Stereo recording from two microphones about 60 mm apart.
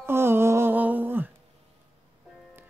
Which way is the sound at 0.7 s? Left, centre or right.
Right.